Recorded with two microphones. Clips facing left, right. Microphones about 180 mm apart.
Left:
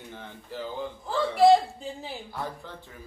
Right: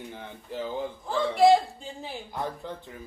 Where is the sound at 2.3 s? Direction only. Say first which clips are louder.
Right 6 dB; 20° right (ahead or behind).